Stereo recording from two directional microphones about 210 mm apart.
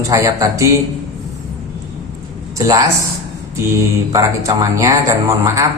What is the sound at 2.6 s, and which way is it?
Speech, 15° right (ahead or behind).